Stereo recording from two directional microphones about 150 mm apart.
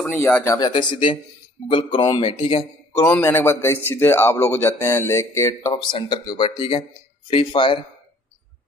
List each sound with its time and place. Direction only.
0.0 s a man's voice: 15° left (ahead or behind)
0.6 s speech: 30° left (ahead or behind)
3.0 s a man's voice: 15° left (ahead or behind); by 7.8 s 35° left (ahead or behind)